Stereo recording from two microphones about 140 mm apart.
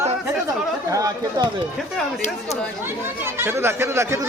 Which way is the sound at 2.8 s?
15° right (ahead or behind).